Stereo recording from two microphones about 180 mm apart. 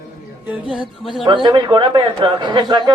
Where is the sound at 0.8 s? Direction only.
25° right (ahead or behind).